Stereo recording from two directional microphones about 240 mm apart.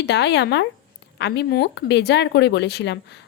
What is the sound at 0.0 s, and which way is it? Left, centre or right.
A woman's voice, left.